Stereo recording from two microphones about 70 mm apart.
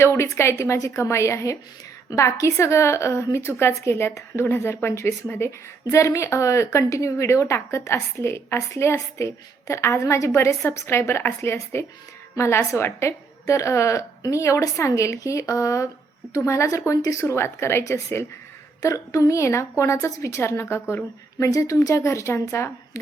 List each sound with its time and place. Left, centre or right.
0.0 s a woman's voice: left
21.3 s a woman's voice: left